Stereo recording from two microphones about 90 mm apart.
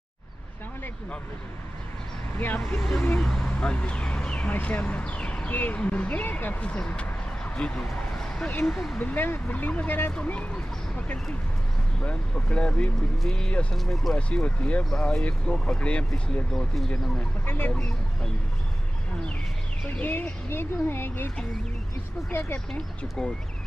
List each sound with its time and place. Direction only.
2.3 s speech: 20° left (ahead or behind)
3.2 s speech: 5° left (ahead or behind)
8.9 s speech: 20° left (ahead or behind); by 17.3 s 5° left (ahead or behind)
17.5 s speech: 20° left (ahead or behind)
17.7 s speech: 10° left (ahead or behind)
20.0 s speech: 20° left (ahead or behind)
22.3 s speech: 25° left (ahead or behind)
22.7 s speech: 10° left (ahead or behind)